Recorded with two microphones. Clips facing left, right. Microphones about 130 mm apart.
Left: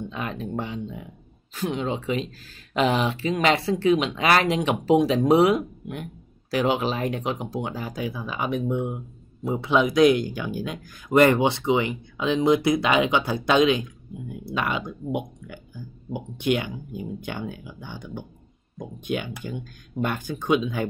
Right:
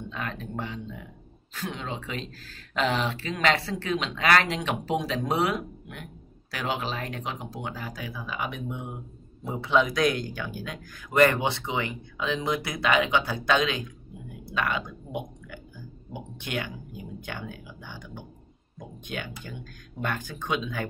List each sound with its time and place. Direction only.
0.1 s speech: 15° left (ahead or behind)
9.6 s speech: 15° left (ahead or behind)
16.1 s speech: 20° left (ahead or behind)